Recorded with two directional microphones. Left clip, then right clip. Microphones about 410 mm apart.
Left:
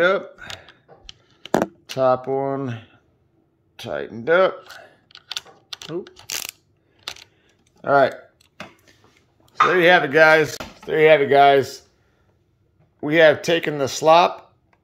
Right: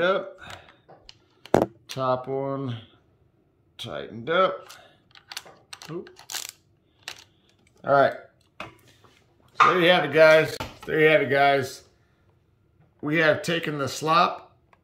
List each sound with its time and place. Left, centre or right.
0.0 s speech: centre
2.0 s speech: centre
5.9 s mechanisms: centre
7.4 s typing: centre
9.8 s speech: centre
13.0 s speech: centre